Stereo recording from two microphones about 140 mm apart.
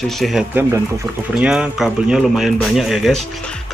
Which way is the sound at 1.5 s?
5° right (ahead or behind).